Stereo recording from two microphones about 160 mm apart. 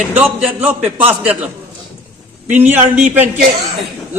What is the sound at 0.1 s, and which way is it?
A man's voice, 10° right (ahead or behind).